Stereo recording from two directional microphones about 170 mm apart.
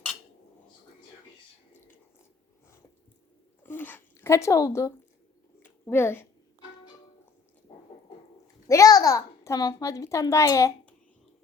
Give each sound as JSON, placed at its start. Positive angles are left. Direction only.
{"t": 3.6, "sound": "a woman's voice", "side_deg": 10}
{"t": 8.6, "sound": "a child's voice", "side_deg": 20}